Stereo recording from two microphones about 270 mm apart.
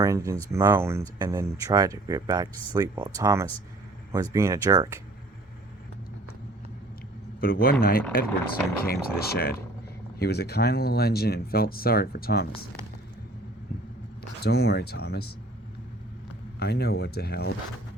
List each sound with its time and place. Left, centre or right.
0.0 s speech: centre
7.4 s speech: left
14.4 s speech: left
16.6 s speech: left